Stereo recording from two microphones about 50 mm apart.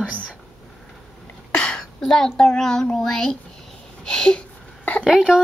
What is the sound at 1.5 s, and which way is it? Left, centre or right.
Throat clearing, left.